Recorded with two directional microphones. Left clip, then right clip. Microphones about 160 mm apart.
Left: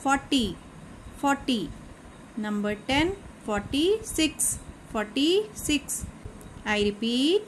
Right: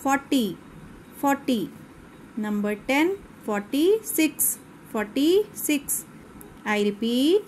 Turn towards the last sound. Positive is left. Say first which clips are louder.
# right 3 dB
turn(degrees=-20)  # may be behind; listen again after turning